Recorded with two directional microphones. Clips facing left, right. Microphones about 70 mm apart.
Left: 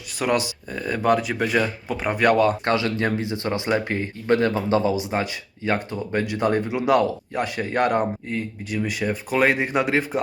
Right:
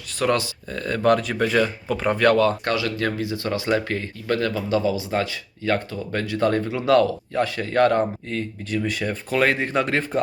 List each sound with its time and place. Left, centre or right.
0.2 s speech: centre